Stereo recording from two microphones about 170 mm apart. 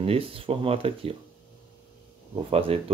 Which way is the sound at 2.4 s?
35° right (ahead or behind).